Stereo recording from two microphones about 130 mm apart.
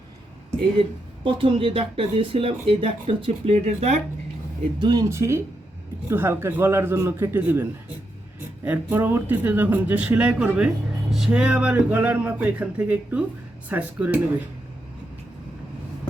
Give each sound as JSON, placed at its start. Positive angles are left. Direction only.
{"t": 0.8, "sound": "speech", "side_deg": -45}
{"t": 4.8, "sound": "speech", "side_deg": -35}
{"t": 5.0, "sound": "speech", "side_deg": -20}